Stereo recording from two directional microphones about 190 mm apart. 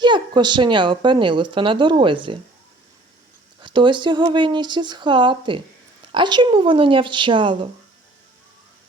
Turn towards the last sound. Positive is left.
turn(degrees=-25)  # may be behind; listen again after turning